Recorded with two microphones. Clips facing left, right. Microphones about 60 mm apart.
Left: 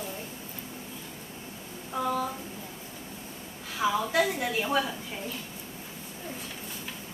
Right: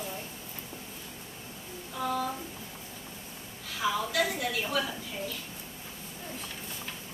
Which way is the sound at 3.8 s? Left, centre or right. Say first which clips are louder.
Left 3 dB; left.